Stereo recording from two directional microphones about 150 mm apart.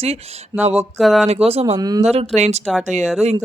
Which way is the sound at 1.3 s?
40° right (ahead or behind).